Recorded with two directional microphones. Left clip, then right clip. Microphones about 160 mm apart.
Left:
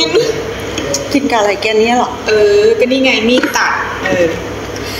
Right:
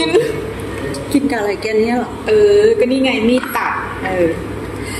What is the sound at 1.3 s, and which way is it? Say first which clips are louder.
A woman's voice: left 6 dB; 15° right (ahead or behind).